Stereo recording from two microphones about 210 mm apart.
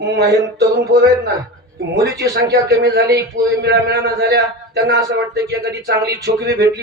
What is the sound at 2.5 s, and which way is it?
Speech, 50° right (ahead or behind).